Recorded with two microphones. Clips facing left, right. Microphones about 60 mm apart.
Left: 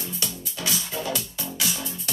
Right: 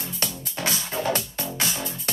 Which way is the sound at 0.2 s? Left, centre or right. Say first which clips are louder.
Right 5 dB; right.